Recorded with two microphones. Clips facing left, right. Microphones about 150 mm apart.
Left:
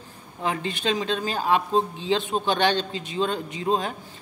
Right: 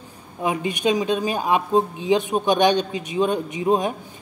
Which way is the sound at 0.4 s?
15° right (ahead or behind).